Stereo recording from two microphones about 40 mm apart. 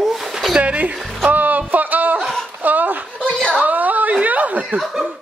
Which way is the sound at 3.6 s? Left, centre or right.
Right.